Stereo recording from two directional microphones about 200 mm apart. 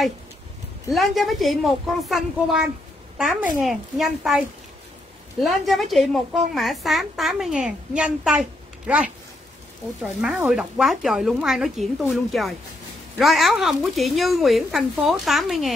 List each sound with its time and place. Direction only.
0.9 s a woman's voice: centre (ahead or behind)
10.2 s a woman's voice: centre (ahead or behind)